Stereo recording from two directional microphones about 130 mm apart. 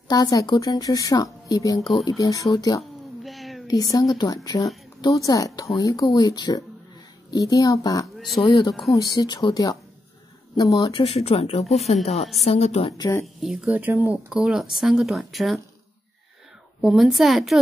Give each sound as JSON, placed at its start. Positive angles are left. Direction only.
{"t": 0.1, "sound": "speech", "side_deg": 30}
{"t": 3.3, "sound": "a sound", "side_deg": 0}
{"t": 3.6, "sound": "a woman's voice", "side_deg": 25}
{"t": 12.9, "sound": "speech", "side_deg": 30}
{"t": 13.2, "sound": "speech", "side_deg": 0}
{"t": 13.7, "sound": "speech", "side_deg": -10}
{"t": 16.8, "sound": "speech", "side_deg": 0}